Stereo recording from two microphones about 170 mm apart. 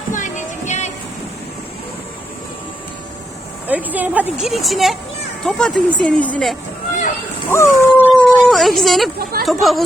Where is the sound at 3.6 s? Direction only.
10° right (ahead or behind); by 6.5 s 5° left (ahead or behind).